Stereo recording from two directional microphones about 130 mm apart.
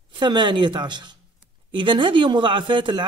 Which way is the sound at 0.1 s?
35° right (ahead or behind).